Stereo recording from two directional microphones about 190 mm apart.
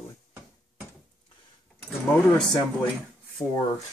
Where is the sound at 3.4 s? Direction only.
25° left (ahead or behind).